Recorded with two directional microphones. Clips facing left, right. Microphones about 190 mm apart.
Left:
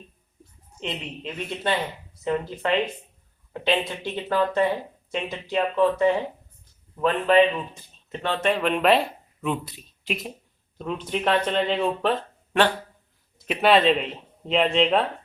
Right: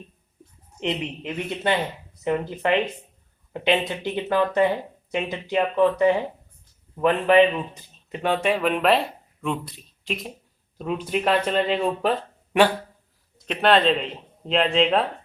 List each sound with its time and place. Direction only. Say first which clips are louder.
0.8 s speech: right 5 dB; 15° right (ahead or behind)
13.4 s speech: even; 5° left (ahead or behind)